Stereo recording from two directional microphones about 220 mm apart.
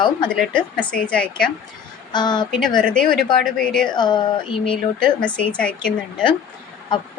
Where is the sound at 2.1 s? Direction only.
20° left (ahead or behind).